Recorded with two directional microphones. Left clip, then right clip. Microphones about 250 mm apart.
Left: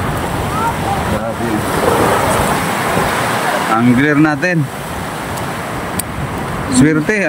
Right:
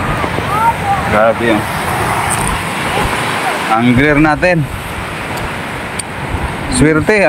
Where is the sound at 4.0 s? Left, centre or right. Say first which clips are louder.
Right 2 dB; centre.